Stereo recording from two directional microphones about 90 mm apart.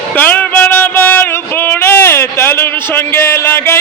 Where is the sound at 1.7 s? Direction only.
25° left (ahead or behind).